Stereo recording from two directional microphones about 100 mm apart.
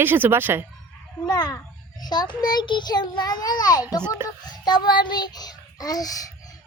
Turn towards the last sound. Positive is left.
turn(degrees=40)  # may be behind; listen again after turning